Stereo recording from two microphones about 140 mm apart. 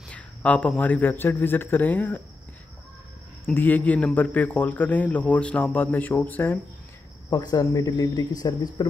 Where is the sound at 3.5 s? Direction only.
10° left (ahead or behind).